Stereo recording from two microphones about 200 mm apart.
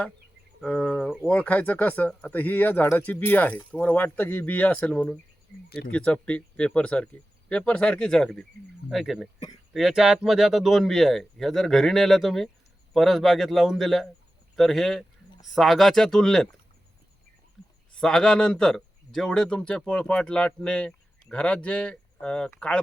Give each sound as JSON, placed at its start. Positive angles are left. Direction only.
{"t": 0.6, "sound": "speech", "side_deg": 5}
{"t": 5.6, "sound": "speech", "side_deg": 50}
{"t": 5.9, "sound": "speech", "side_deg": 5}
{"t": 17.6, "sound": "a sound", "side_deg": 0}
{"t": 18.0, "sound": "speech", "side_deg": 5}